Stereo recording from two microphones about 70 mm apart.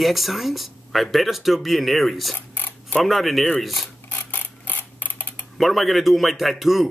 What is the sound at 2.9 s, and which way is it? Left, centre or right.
Speech, centre.